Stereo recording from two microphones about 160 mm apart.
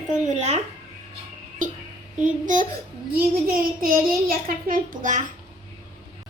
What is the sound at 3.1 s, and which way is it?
A woman's voice, 65° right (ahead or behind).